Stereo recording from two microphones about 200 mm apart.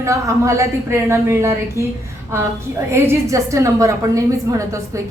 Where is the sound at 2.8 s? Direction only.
15° right (ahead or behind).